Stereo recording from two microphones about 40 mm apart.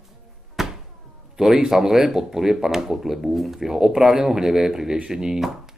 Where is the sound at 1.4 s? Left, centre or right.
Centre.